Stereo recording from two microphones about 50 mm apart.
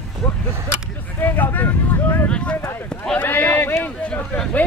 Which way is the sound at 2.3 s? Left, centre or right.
Left.